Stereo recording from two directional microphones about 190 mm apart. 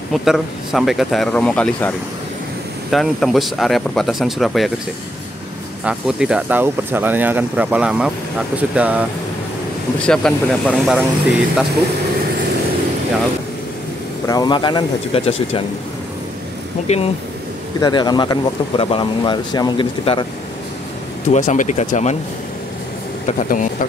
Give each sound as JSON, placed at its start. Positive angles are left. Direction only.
{"t": 0.1, "sound": "speech", "side_deg": 0}
{"t": 5.9, "sound": "speech", "side_deg": -5}
{"t": 10.0, "sound": "speech", "side_deg": 5}
{"t": 14.2, "sound": "speech", "side_deg": 20}
{"t": 16.8, "sound": "speech", "side_deg": 35}
{"t": 17.7, "sound": "speech", "side_deg": 20}
{"t": 21.3, "sound": "speech", "side_deg": 40}
{"t": 23.2, "sound": "speech", "side_deg": 45}